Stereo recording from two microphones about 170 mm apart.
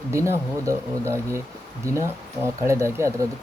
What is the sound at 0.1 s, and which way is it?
Speech, 15° right (ahead or behind).